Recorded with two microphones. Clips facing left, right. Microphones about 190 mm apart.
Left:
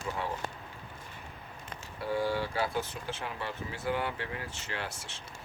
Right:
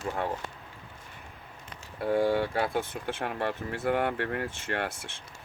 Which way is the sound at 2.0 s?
55° right (ahead or behind).